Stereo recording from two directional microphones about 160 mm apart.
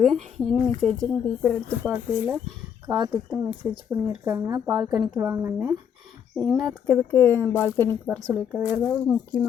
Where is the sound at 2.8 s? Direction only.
25° right (ahead or behind).